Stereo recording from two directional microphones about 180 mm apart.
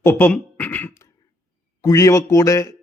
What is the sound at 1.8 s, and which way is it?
Speech, 15° left (ahead or behind).